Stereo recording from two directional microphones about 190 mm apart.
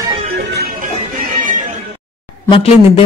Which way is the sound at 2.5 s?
30° left (ahead or behind).